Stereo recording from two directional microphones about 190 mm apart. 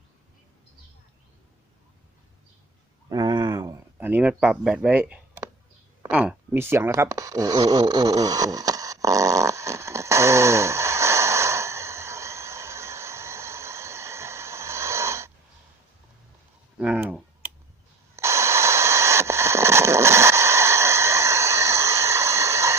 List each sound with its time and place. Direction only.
3.1 s a sound: 20° right (ahead or behind)
3.9 s speech: 10° right (ahead or behind)
6.1 s snoring: 5° right (ahead or behind)
16.7 s typing: 5° right (ahead or behind)
18.2 s radio: 15° right (ahead or behind)